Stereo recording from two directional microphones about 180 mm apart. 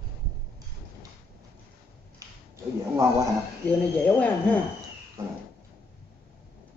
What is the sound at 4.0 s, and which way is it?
Speech, 10° left (ahead or behind).